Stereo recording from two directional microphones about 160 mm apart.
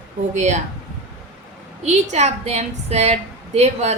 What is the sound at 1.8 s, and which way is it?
A woman's voice, 45° right (ahead or behind).